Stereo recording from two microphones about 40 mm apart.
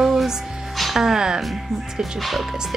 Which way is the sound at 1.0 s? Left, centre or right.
Centre.